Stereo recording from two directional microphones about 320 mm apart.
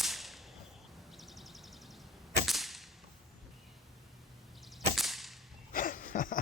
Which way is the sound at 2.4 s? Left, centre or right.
Centre.